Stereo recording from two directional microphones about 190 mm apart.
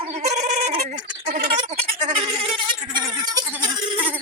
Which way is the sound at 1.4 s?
30° right (ahead or behind).